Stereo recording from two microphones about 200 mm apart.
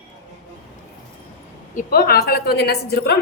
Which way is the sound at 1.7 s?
50° left (ahead or behind).